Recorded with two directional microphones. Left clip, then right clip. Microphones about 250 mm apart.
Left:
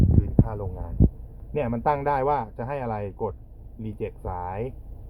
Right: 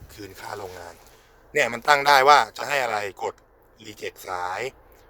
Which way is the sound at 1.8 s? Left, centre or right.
Right.